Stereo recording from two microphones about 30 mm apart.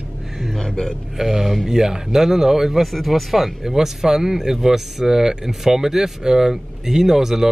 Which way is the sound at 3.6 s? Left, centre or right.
Centre.